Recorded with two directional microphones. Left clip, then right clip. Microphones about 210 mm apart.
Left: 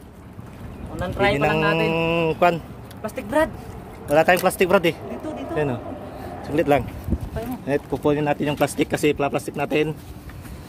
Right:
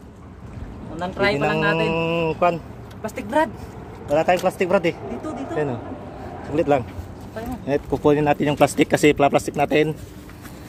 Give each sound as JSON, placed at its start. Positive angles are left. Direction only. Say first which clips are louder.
{"t": 0.9, "sound": "speech", "louder": "even", "side_deg": 10}
{"t": 3.0, "sound": "speech", "louder": "even", "side_deg": 5}
{"t": 4.1, "sound": "speech", "louder": "left 2 dB", "side_deg": 20}
{"t": 5.2, "sound": "speech", "louder": "even", "side_deg": 0}
{"t": 5.5, "sound": "speech", "louder": "left 1 dB", "side_deg": 10}
{"t": 7.9, "sound": "speech", "louder": "right 5 dB", "side_deg": -15}